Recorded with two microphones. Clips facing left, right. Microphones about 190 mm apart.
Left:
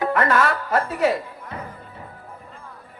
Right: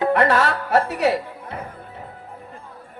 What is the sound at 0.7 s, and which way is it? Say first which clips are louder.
Speech: right 4 dB; 70° right (ahead or behind).